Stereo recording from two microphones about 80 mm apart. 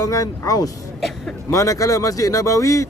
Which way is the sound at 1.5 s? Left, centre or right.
Left.